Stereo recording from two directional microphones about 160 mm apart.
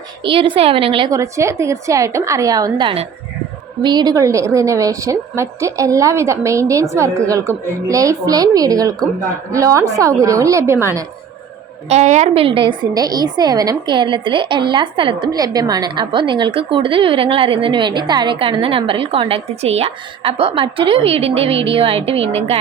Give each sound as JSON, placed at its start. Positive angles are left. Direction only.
{"t": 0.2, "sound": "a woman's voice", "side_deg": -30}
{"t": 1.1, "sound": "a woman's voice", "side_deg": -20}
{"t": 11.9, "sound": "a woman's voice", "side_deg": -45}